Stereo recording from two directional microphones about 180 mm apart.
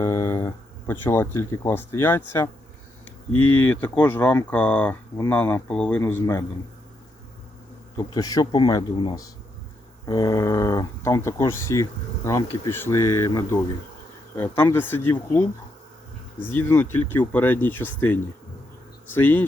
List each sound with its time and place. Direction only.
0.0 s speech: 15° left (ahead or behind)
7.9 s speech: 20° left (ahead or behind)
19.1 s speech: 10° left (ahead or behind)